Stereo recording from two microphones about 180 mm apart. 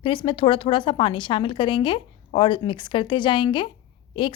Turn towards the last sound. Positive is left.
turn(degrees=30)  # may be behind; listen again after turning